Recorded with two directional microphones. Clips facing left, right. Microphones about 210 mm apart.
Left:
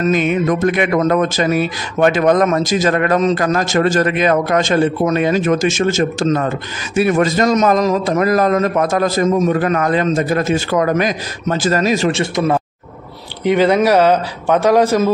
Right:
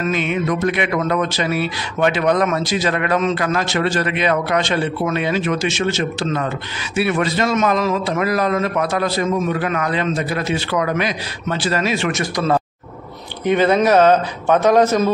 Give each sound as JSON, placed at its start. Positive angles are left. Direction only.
{"t": 0.0, "sound": "speech", "side_deg": 40}
{"t": 13.4, "sound": "speech", "side_deg": 10}